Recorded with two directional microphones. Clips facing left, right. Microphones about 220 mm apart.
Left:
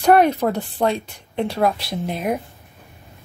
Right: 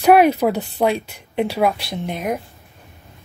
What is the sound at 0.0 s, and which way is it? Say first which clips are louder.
Speech: right 2 dB; 10° right (ahead or behind).